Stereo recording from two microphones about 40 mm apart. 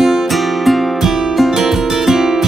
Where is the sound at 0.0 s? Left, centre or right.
Centre.